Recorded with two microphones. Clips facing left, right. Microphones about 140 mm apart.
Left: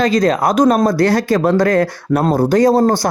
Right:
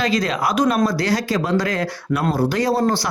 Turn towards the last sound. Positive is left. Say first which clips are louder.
# left 7 dB
turn(degrees=45)  # may be behind; listen again after turning